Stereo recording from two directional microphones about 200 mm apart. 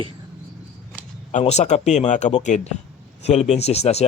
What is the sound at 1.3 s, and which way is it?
A man's voice, 35° left (ahead or behind).